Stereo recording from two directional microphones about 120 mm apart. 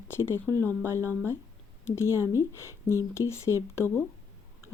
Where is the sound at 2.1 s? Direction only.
20° right (ahead or behind).